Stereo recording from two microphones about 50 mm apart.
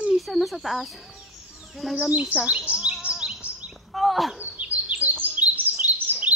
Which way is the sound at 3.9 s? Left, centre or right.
Centre.